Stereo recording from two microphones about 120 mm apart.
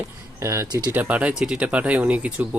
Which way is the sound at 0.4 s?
25° right (ahead or behind).